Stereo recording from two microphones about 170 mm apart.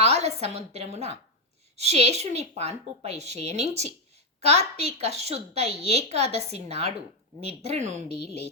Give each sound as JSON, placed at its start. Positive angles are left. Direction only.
{"t": 0.0, "sound": "a woman's voice", "side_deg": -40}